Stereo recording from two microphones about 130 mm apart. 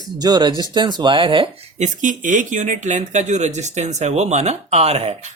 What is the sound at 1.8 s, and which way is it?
Speech, 75° right (ahead or behind).